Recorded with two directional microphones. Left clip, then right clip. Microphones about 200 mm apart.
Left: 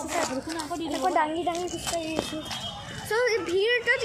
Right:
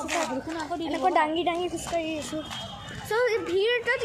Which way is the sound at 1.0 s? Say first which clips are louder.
Right 2 dB; 25° right (ahead or behind).